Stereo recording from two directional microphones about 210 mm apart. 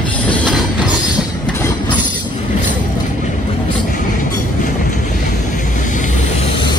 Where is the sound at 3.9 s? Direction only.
40° left (ahead or behind).